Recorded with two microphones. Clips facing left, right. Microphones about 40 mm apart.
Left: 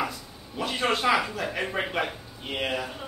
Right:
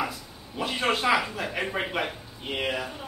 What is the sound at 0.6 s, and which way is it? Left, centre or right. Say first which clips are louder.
A man's voice: even; centre.